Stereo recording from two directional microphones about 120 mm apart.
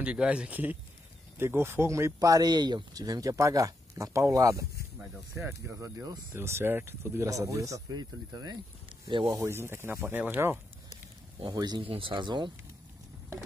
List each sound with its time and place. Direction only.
0.0 s speech: 10° right (ahead or behind); by 4.6 s 25° right (ahead or behind)
5.7 s speech: 25° right (ahead or behind); by 9.3 s 45° right (ahead or behind)
9.3 s speech: 25° right (ahead or behind)
11.5 s speech: 35° right (ahead or behind)
11.8 s speech: 50° right (ahead or behind)